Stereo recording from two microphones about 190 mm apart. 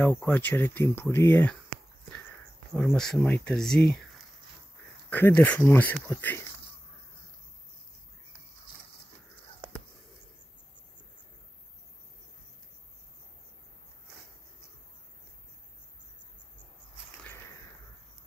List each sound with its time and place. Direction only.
0.0 s speech: 10° left (ahead or behind)
2.9 s speech: centre (ahead or behind)
5.1 s speech: 10° left (ahead or behind)